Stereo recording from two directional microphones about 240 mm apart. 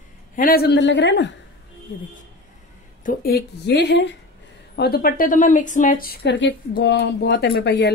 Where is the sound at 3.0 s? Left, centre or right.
Left.